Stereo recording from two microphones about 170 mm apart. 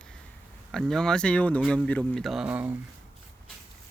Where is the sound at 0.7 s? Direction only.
Centre (ahead or behind).